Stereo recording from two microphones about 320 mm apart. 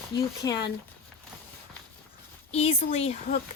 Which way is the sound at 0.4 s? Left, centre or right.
Left.